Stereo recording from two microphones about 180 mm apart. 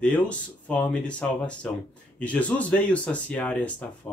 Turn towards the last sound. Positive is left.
turn(degrees=5)  # may be behind; listen again after turning